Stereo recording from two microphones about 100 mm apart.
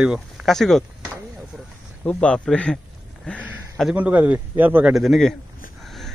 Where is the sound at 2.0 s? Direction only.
10° left (ahead or behind).